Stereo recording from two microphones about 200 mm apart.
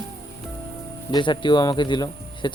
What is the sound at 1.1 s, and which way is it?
Speech, 25° left (ahead or behind).